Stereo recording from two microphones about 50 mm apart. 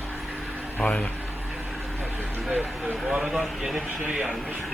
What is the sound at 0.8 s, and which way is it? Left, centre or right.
Speech, left.